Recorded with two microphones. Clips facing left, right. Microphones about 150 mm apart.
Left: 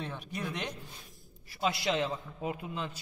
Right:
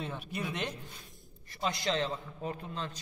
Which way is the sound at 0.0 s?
5° right (ahead or behind).